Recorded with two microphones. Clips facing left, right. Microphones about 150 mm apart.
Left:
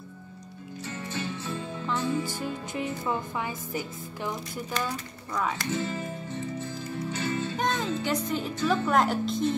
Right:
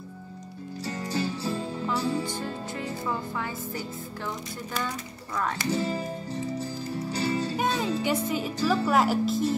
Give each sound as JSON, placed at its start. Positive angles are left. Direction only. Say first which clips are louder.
{"t": 0.8, "sound": "music", "louder": "right 5 dB", "side_deg": -35}
{"t": 2.4, "sound": "music", "louder": "left 1 dB", "side_deg": 15}
{"t": 4.8, "sound": "speech", "louder": "even", "side_deg": 5}
{"t": 5.7, "sound": "music", "louder": "right 3 dB", "side_deg": -35}
{"t": 7.5, "sound": "music", "louder": "right 2 dB", "side_deg": -10}
{"t": 8.0, "sound": "speech", "louder": "right 2 dB", "side_deg": -5}